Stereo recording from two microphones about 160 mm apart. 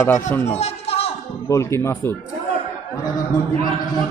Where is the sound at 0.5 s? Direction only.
40° left (ahead or behind).